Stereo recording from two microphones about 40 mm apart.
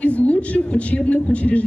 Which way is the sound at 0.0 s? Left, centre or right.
Left.